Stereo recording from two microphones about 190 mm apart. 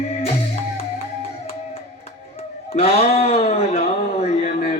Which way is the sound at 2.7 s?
35° left (ahead or behind).